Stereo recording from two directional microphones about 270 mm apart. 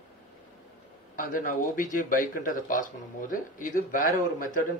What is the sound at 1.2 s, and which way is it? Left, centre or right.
Speech, left.